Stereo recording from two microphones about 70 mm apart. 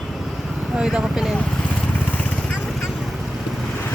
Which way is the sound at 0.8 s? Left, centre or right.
Centre.